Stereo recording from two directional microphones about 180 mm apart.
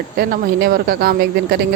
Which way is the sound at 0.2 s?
55° right (ahead or behind).